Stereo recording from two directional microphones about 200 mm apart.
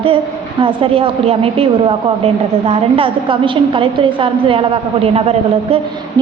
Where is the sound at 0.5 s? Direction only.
25° right (ahead or behind).